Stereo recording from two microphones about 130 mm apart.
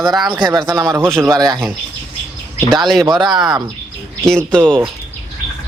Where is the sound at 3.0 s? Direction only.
35° right (ahead or behind).